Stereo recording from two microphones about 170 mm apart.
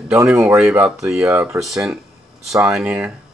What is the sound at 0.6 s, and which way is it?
Speech, 15° right (ahead or behind).